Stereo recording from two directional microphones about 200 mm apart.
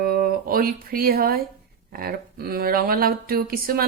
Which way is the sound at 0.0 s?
50° right (ahead or behind).